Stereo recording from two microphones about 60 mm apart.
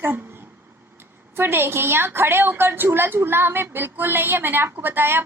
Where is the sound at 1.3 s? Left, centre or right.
Right.